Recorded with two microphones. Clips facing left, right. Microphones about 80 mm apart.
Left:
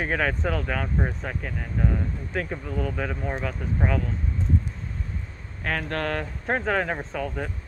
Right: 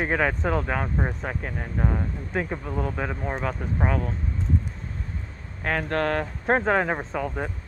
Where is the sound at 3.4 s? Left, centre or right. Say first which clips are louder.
Right 2 dB; right.